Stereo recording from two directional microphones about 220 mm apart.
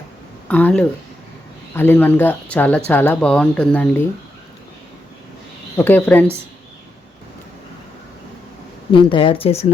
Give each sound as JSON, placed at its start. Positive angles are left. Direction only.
{"t": 0.4, "sound": "speech", "side_deg": 5}
{"t": 5.7, "sound": "speech", "side_deg": 10}
{"t": 8.9, "sound": "speech", "side_deg": 20}